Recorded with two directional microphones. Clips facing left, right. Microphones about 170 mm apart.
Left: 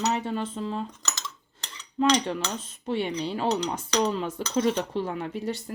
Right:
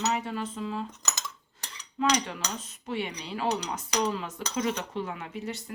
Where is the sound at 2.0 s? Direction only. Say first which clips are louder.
Left 4 dB; 30° left (ahead or behind).